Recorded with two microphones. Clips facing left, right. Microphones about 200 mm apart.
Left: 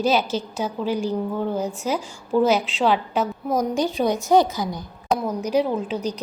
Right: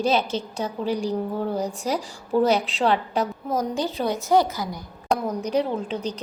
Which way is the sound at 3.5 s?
15° left (ahead or behind).